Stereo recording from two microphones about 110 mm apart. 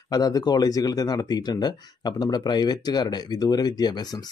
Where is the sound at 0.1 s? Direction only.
35° left (ahead or behind).